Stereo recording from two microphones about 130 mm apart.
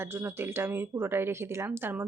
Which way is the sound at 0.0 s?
20° right (ahead or behind).